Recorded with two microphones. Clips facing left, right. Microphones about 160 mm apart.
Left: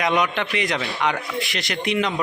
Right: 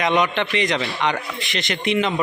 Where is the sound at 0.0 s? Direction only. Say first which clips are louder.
Right 2 dB; centre (ahead or behind).